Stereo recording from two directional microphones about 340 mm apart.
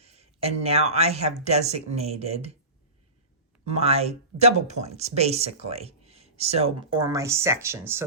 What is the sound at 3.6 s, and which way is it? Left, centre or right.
Speech, centre.